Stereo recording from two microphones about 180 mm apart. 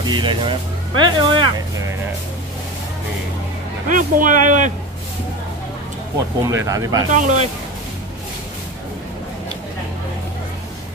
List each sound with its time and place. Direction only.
0.0 s speech: 25° right (ahead or behind)
3.9 s speech: 45° right (ahead or behind)
6.4 s speech: 15° right (ahead or behind)
7.2 s speech: 45° right (ahead or behind)